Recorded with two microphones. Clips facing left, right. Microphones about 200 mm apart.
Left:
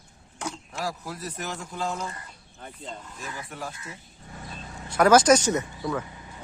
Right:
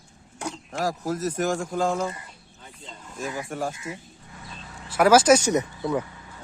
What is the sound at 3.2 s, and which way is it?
Speech, 45° right (ahead or behind).